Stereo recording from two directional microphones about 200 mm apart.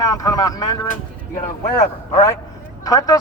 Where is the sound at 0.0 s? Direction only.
20° left (ahead or behind).